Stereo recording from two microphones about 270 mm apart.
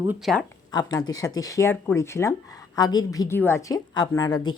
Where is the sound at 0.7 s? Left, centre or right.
Centre.